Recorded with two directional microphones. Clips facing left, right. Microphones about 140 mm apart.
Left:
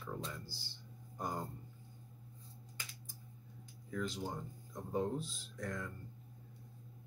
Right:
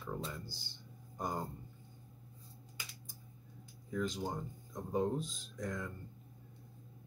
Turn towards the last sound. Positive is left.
turn(degrees=-15)  # may be behind; listen again after turning